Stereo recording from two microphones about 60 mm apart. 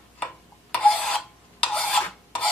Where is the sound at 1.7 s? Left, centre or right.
Centre.